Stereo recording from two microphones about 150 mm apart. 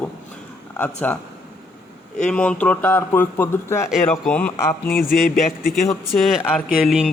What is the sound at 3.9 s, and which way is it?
Speech, 5° left (ahead or behind).